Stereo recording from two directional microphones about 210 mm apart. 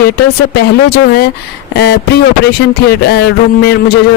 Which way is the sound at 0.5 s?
50° left (ahead or behind).